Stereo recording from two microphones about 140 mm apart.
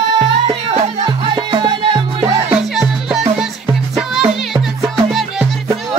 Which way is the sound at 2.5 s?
5° right (ahead or behind).